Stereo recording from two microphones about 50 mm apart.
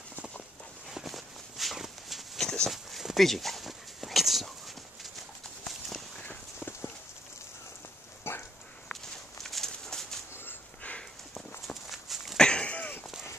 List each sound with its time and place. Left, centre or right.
0.9 s walk: centre
2.4 s walk: centre
2.7 s a sound: centre
3.3 s dog: centre
5.7 s walk: centre
6.2 s clip-clop: left
8.2 s dog: left
9.4 s a sound: centre
11.3 s walk: centre
12.4 s a sound: centre